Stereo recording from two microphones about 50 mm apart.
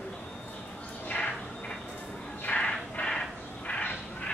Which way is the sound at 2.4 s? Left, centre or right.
Left.